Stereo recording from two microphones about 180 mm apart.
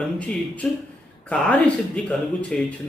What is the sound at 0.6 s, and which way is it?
Speech, 5° left (ahead or behind).